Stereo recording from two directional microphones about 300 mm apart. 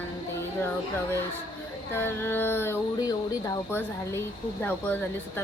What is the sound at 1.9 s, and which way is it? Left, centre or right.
A woman's voice, centre.